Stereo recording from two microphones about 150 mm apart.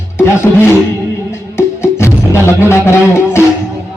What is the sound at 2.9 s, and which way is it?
Speech, 15° left (ahead or behind).